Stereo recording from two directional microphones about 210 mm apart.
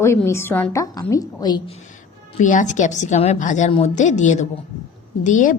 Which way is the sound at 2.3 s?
35° left (ahead or behind).